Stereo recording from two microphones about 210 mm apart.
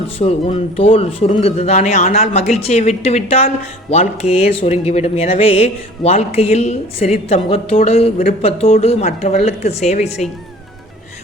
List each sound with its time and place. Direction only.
0.2 s speech: 30° left (ahead or behind)